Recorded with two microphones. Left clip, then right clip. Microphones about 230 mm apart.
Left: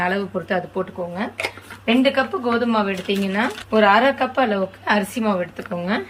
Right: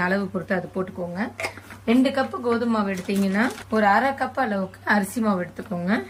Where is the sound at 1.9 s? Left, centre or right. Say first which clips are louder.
Left 4 dB; right.